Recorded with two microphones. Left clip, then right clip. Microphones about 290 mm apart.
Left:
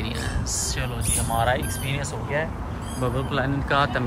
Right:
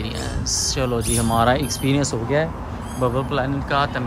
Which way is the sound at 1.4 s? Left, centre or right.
Right.